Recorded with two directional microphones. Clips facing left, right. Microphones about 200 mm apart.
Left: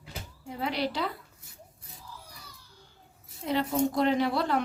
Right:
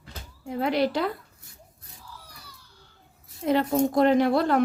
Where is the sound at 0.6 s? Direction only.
50° right (ahead or behind).